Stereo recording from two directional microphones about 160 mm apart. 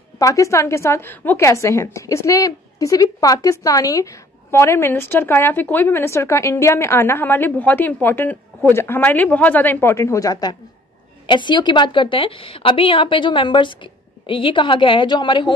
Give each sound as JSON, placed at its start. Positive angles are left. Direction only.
{"t": 0.2, "sound": "a woman's voice", "side_deg": 20}